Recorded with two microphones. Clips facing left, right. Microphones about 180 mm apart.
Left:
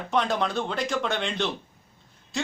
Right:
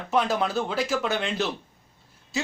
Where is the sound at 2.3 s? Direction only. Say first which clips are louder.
Right 1 dB; 5° right (ahead or behind).